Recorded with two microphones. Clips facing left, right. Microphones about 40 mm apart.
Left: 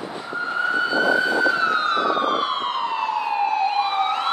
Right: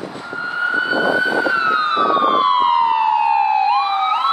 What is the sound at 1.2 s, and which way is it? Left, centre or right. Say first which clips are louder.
Emergency vehicle: right 2 dB; centre.